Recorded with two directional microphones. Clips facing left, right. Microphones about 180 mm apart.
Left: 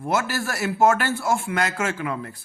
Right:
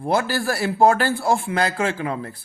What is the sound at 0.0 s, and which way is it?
A man's voice, 30° right (ahead or behind).